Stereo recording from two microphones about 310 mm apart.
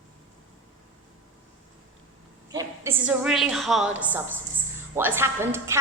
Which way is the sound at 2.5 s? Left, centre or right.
Centre.